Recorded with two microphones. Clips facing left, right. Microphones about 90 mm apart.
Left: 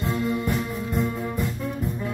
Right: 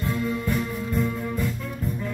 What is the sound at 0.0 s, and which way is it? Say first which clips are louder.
Music: left 1 dB; 20° left (ahead or behind).